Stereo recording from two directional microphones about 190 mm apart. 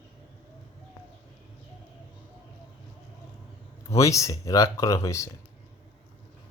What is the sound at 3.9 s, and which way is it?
Speech, 15° left (ahead or behind).